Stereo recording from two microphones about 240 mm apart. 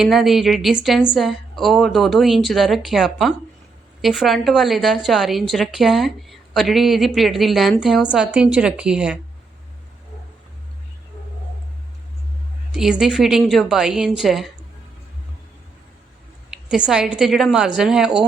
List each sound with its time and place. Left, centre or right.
0.0 s a woman's voice: centre
12.7 s a woman's voice: centre
16.5 s a woman's voice: centre